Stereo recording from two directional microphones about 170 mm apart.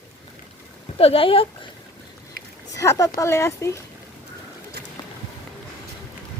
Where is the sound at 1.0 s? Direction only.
35° left (ahead or behind).